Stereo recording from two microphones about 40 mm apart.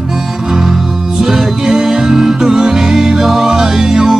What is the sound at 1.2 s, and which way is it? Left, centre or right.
Music, centre.